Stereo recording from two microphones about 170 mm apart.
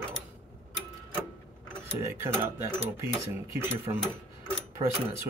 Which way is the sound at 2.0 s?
15° right (ahead or behind).